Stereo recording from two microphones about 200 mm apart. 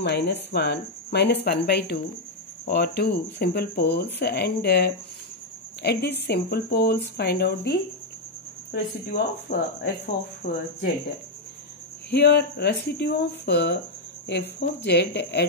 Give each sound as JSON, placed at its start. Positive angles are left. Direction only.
{"t": 0.0, "sound": "speech", "side_deg": 60}
{"t": 10.4, "sound": "speech", "side_deg": 35}
{"t": 12.1, "sound": "speech", "side_deg": 55}